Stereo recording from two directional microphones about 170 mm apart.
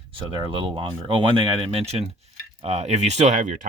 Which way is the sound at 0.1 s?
30° right (ahead or behind).